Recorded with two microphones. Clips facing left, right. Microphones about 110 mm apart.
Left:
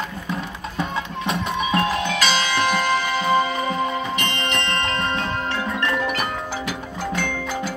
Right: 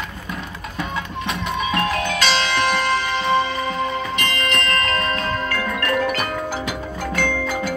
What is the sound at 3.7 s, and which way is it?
Music, 30° left (ahead or behind).